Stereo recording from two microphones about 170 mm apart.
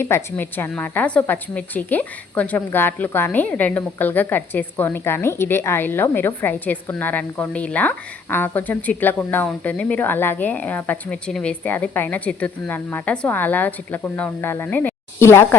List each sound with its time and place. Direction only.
0.0 s a woman's voice: 15° left (ahead or behind)